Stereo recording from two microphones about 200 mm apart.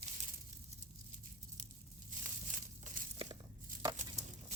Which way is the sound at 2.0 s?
40° right (ahead or behind).